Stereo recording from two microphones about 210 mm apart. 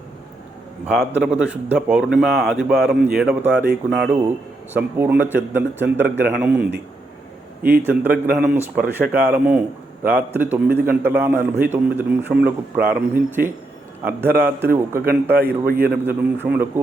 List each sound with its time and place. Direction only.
0.9 s a man's voice: 5° right (ahead or behind)
7.8 s a man's voice: 10° right (ahead or behind)
15.4 s a man's voice: 45° right (ahead or behind)
16.0 s a man's voice: 10° right (ahead or behind)